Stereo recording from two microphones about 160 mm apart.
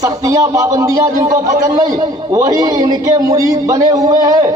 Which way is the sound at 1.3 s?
60° right (ahead or behind).